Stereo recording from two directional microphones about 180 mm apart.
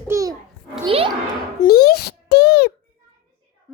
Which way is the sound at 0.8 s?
30° right (ahead or behind).